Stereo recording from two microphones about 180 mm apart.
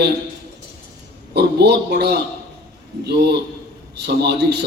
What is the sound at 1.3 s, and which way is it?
A man's voice, 65° right (ahead or behind).